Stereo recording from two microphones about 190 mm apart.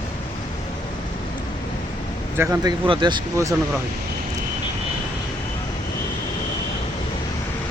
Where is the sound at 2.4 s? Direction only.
15° right (ahead or behind).